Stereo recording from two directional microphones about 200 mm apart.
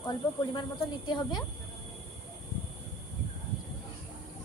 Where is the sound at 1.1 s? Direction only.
20° left (ahead or behind).